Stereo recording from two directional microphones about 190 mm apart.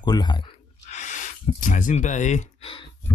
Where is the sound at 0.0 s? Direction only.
20° left (ahead or behind).